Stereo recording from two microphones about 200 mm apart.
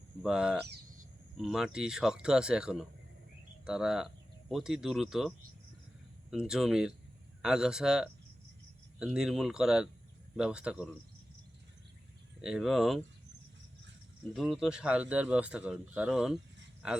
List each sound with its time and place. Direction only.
0.2 s speech: 5° right (ahead or behind)
6.3 s speech: 5° right (ahead or behind)
12.4 s speech: centre (ahead or behind)
14.3 s speech: centre (ahead or behind)